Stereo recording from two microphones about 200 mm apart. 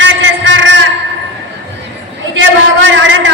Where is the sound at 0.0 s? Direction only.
65° right (ahead or behind).